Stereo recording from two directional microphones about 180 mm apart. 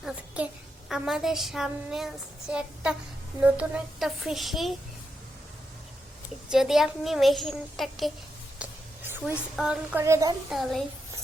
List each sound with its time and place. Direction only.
0.0 s a woman's voice: 5° right (ahead or behind)
6.5 s a child's voice: centre (ahead or behind)
8.6 s a sound: 5° right (ahead or behind)
9.6 s a child's voice: 5° right (ahead or behind)
10.0 s a woman's voice: 15° right (ahead or behind)
10.5 s a child's voice: centre (ahead or behind)